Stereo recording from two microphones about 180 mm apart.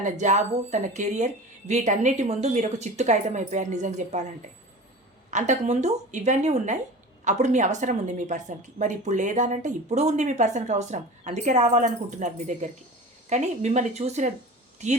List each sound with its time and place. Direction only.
0.0 s a woman's voice: 40° right (ahead or behind)
5.3 s a woman's voice: 40° right (ahead or behind)